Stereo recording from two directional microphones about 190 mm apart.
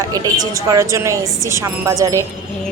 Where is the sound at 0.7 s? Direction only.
15° right (ahead or behind).